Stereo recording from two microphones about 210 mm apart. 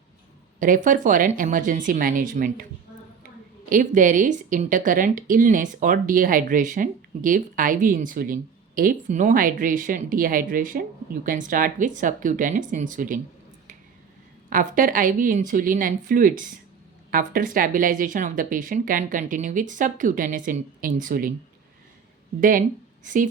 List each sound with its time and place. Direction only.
0.6 s speech: 40° right (ahead or behind)
3.7 s speech: 40° right (ahead or behind)
14.5 s speech: 40° right (ahead or behind)
22.4 s speech: 40° right (ahead or behind)